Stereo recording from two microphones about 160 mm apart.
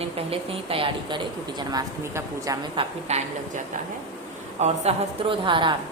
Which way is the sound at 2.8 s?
45° right (ahead or behind).